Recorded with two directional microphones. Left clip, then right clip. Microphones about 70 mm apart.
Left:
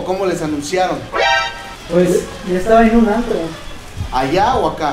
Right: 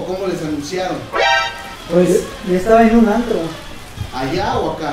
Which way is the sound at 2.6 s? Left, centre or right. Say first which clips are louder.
Even; right.